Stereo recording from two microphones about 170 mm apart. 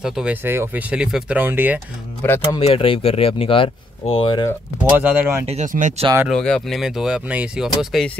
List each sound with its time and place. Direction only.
0.0 s speech: 5° right (ahead or behind)
2.2 s speech: 15° left (ahead or behind)
2.6 s speech: 35° left (ahead or behind)
4.9 s speech: 10° right (ahead or behind)
5.5 s speech: 45° right (ahead or behind)
6.2 s speech: 5° left (ahead or behind)